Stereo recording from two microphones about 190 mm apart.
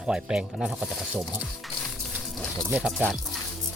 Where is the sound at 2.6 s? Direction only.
5° right (ahead or behind).